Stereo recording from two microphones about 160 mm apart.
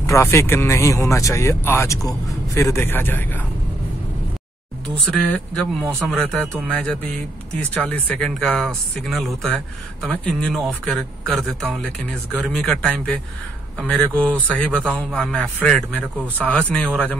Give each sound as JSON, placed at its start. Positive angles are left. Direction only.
{"t": 0.0, "sound": "speech", "side_deg": 20}
{"t": 5.1, "sound": "speech", "side_deg": 5}